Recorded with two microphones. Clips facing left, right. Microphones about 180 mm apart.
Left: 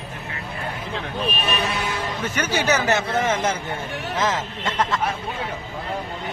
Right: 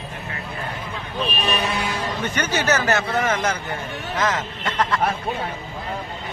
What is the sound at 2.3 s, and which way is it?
A man's voice, 10° left (ahead or behind).